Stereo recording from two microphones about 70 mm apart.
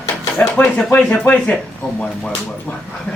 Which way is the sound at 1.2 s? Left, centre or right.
Left.